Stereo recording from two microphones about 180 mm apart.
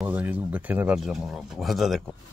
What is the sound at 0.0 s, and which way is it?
Speech, 10° right (ahead or behind).